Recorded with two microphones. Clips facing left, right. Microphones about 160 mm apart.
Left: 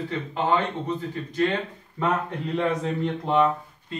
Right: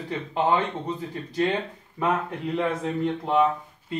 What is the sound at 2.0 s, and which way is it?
Speech, 5° right (ahead or behind).